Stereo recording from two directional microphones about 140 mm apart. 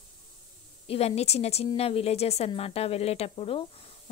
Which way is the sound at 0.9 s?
45° left (ahead or behind).